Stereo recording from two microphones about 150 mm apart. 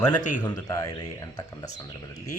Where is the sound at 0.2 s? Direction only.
55° left (ahead or behind).